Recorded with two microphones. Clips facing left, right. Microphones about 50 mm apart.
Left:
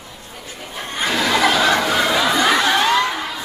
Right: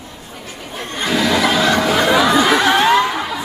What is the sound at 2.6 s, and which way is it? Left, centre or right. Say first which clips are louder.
Snicker: right 3 dB; centre.